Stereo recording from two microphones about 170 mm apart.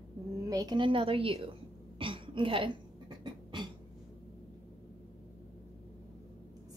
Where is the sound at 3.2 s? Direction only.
25° right (ahead or behind).